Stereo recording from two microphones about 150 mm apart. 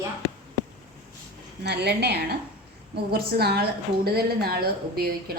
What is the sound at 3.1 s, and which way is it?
A woman's voice, 90° right.